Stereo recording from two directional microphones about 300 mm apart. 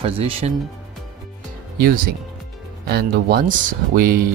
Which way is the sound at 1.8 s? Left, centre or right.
Right.